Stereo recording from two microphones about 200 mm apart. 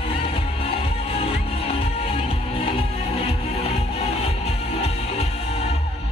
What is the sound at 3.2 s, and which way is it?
Music, 30° left (ahead or behind).